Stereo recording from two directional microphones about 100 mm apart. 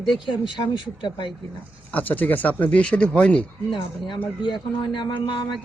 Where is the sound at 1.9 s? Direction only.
15° left (ahead or behind).